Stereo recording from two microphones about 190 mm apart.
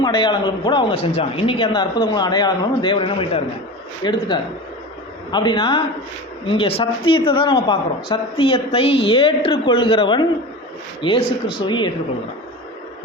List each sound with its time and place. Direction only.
0.0 s speech: 25° left (ahead or behind)
5.3 s speech: 25° left (ahead or behind)